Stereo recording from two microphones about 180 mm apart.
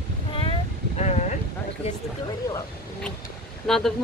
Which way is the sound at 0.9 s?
40° left (ahead or behind).